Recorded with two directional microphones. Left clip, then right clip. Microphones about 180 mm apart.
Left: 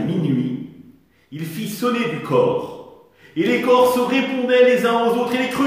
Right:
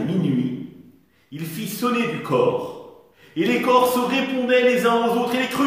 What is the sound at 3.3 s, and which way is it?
A man's voice, 10° right (ahead or behind).